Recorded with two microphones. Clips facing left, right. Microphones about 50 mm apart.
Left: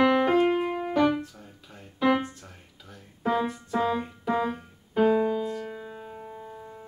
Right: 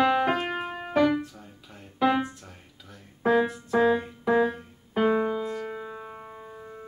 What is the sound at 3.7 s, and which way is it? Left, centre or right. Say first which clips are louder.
Keyboard: right 5 dB; centre.